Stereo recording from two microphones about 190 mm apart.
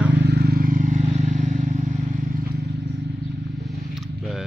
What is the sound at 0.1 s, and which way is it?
Vehicle, 60° right (ahead or behind).